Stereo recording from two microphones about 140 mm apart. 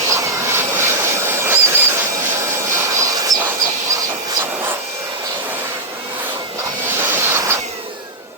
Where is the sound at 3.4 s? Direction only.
20° right (ahead or behind).